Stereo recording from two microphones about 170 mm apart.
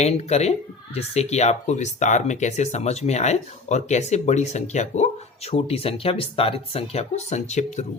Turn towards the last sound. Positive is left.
turn(degrees=45)  # may be behind; listen again after turning